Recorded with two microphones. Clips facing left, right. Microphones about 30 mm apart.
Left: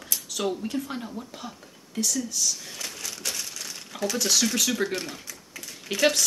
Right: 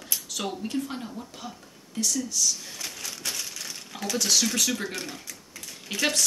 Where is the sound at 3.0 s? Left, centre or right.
Centre.